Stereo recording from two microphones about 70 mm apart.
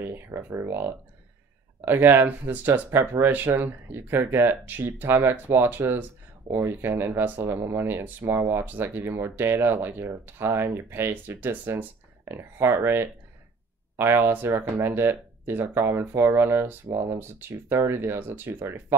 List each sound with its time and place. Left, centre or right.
0.0 s speech: right
16.8 s speech: right